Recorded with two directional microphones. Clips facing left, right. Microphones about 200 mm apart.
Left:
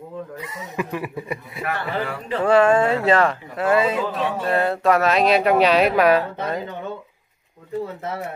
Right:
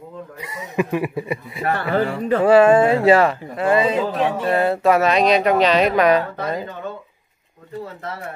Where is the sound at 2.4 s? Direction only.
10° right (ahead or behind).